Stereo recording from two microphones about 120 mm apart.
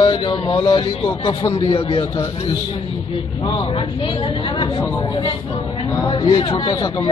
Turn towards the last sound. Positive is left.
turn(degrees=40)  # may be behind; listen again after turning